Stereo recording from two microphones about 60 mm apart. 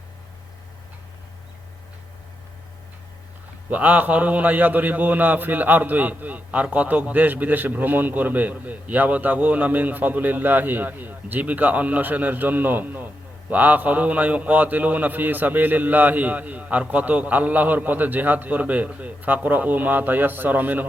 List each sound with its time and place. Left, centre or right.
3.7 s a man's voice: right